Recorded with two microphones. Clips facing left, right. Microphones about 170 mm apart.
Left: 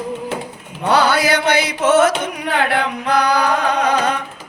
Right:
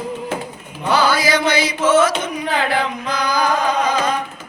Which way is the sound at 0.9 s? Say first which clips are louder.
Left 1 dB; 65° left (ahead or behind).